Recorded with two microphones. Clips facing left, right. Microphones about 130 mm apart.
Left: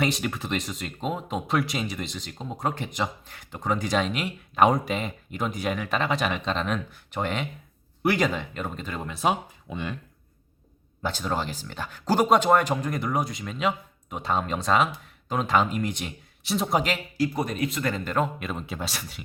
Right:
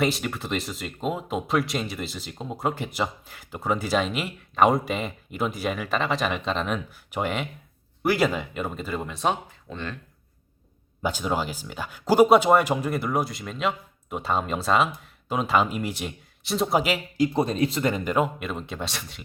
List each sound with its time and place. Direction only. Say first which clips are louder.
0.0 s speech: right 1 dB; centre (ahead or behind)
11.0 s speech: right 2 dB; 10° right (ahead or behind)
17.2 s speech: right 4 dB; 25° right (ahead or behind)
17.9 s speech: right 2 dB; 10° right (ahead or behind); by 19.2 s 5° left (ahead or behind)